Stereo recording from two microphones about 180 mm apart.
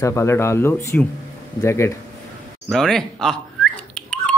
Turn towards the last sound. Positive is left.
turn(degrees=5)  # may be behind; listen again after turning